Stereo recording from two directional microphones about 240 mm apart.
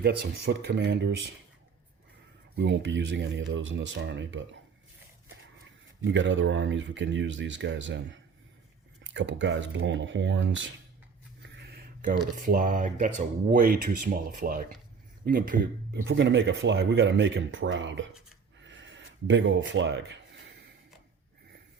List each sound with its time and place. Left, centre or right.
0.0 s speech: right
2.6 s speech: right
6.1 s speech: right
11.6 s a sound: right
12.4 s speech: right
18.6 s a sound: right